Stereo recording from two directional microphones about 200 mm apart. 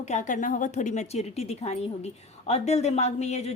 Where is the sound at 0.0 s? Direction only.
35° left (ahead or behind).